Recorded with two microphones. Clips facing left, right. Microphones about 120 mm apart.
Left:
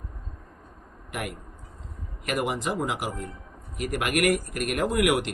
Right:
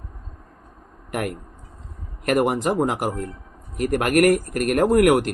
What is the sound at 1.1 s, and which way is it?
Speech, 50° right (ahead or behind).